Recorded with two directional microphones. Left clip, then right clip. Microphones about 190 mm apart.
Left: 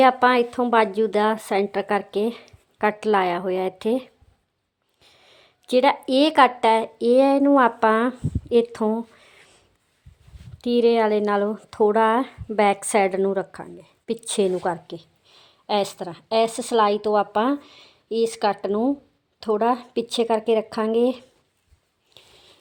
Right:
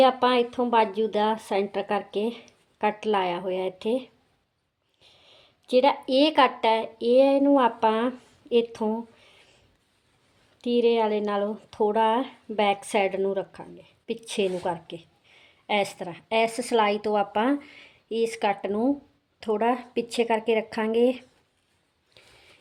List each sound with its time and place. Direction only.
0.0 s a woman's voice: 25° left (ahead or behind)